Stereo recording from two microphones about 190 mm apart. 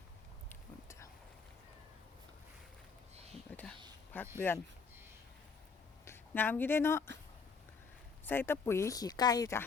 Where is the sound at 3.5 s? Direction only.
10° left (ahead or behind).